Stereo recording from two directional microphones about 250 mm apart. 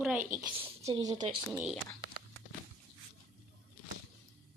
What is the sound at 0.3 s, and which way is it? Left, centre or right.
Speech, centre.